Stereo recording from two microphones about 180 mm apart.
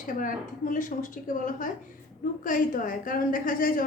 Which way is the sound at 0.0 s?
45° left (ahead or behind).